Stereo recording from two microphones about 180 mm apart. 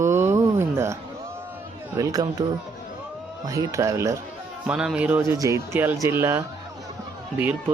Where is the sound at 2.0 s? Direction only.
20° right (ahead or behind).